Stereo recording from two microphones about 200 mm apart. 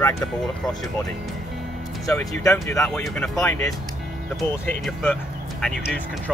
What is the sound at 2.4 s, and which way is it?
Speech, 15° left (ahead or behind).